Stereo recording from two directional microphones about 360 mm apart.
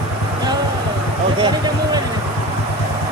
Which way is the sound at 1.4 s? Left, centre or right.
Centre.